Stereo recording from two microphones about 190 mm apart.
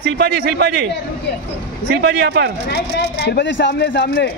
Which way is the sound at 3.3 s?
65° left (ahead or behind).